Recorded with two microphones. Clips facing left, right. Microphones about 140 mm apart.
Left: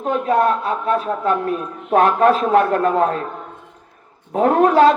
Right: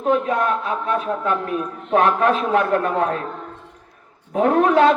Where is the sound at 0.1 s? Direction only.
40° left (ahead or behind).